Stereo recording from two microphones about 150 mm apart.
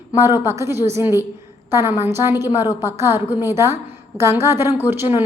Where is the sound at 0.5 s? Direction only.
15° right (ahead or behind).